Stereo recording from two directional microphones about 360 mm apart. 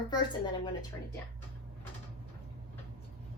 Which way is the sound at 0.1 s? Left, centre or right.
Centre.